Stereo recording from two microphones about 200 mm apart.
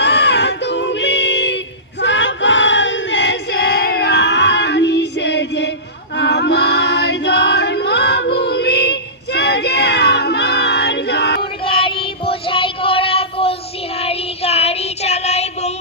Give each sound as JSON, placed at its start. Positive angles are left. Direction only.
{"t": 0.0, "sound": "music", "side_deg": 60}
{"t": 2.0, "sound": "crowd", "side_deg": 65}
{"t": 6.1, "sound": "choir", "side_deg": 60}
{"t": 11.6, "sound": "child singing", "side_deg": 25}